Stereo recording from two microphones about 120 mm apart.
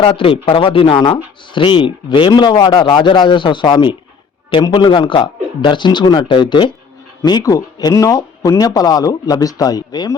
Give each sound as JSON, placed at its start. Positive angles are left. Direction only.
{"t": 0.0, "sound": "speech", "side_deg": 50}